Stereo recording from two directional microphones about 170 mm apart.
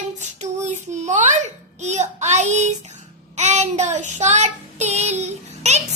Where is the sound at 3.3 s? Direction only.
40° right (ahead or behind).